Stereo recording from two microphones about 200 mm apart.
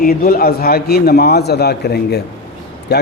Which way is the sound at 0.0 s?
50° left (ahead or behind).